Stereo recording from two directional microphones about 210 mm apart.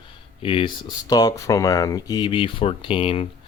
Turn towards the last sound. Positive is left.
turn(degrees=25)  # may be behind; listen again after turning